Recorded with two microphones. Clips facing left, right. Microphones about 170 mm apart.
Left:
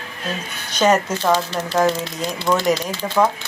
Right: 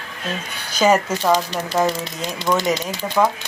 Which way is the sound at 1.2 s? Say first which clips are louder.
Even; 15° right (ahead or behind).